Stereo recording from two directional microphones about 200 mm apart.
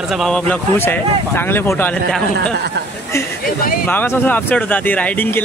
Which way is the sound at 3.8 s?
10° left (ahead or behind).